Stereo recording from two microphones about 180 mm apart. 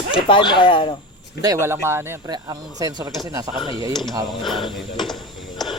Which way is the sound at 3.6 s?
25° left (ahead or behind).